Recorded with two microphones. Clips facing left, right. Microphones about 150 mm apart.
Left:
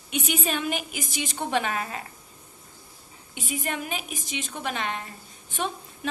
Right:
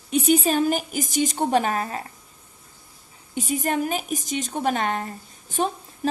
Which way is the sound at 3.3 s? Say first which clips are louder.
Right 7 dB; 40° right (ahead or behind).